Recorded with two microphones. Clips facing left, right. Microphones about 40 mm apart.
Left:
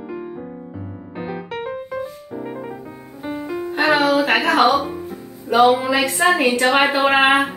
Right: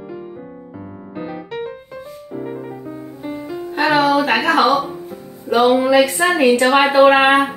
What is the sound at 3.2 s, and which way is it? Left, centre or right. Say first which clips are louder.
Music: left 2 dB; centre.